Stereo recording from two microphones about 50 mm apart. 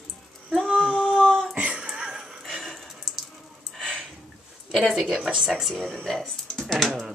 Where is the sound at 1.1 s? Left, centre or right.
Centre.